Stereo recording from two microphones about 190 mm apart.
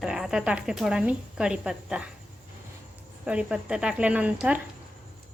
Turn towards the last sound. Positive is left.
turn(degrees=-5)  # may be behind; listen again after turning